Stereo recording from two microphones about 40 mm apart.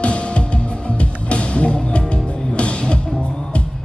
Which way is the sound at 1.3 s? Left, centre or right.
Left.